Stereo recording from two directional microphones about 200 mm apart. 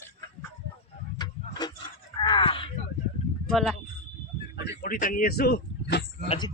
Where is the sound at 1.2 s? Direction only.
20° left (ahead or behind).